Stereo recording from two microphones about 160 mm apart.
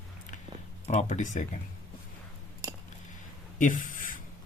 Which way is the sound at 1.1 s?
50° left (ahead or behind).